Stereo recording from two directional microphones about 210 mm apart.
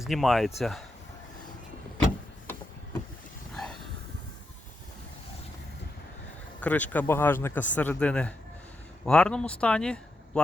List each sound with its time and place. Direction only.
0.0 s speech: centre (ahead or behind)
3.5 s a sound: centre (ahead or behind)
6.6 s speech: 10° left (ahead or behind)